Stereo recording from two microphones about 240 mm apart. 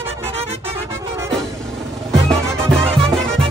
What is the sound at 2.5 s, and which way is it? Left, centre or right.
Music, centre.